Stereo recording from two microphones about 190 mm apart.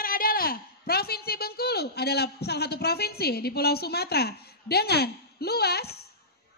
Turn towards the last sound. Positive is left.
turn(degrees=55)  # may be behind; listen again after turning